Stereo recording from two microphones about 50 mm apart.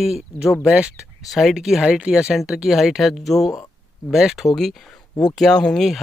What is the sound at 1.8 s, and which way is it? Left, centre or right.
Speech, centre.